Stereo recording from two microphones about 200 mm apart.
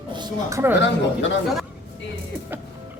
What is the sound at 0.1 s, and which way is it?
Speech, 20° right (ahead or behind).